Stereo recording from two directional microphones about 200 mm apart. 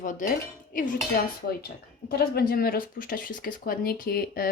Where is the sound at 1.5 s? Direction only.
50° left (ahead or behind).